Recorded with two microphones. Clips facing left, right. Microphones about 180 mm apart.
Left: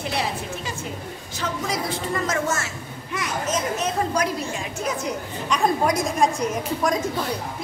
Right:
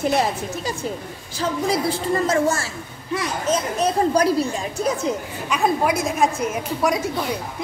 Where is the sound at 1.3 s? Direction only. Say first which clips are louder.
Right 6 dB; 30° right (ahead or behind).